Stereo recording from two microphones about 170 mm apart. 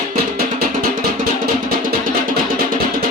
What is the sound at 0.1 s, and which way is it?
Music, 60° right (ahead or behind).